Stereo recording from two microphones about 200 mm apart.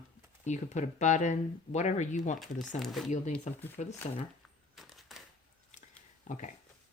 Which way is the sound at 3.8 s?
40° left (ahead or behind).